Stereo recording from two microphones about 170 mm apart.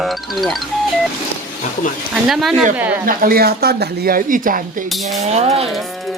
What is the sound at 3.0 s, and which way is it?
Speech, 60° right (ahead or behind).